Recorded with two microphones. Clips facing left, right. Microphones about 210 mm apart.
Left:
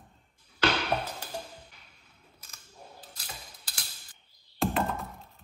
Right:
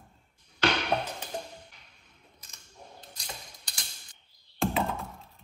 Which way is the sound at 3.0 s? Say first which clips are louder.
Right 2 dB; 5° left (ahead or behind).